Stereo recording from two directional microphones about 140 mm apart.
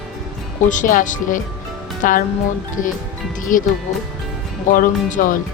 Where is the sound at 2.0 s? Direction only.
80° left.